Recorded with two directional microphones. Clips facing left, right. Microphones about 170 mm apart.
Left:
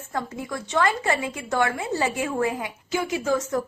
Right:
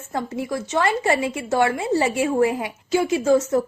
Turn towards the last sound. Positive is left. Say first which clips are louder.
# right 6 dB
turn(degrees=-25)  # may be behind; listen again after turning